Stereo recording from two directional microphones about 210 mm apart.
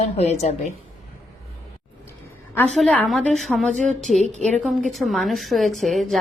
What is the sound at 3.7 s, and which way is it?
Speech, 35° right (ahead or behind).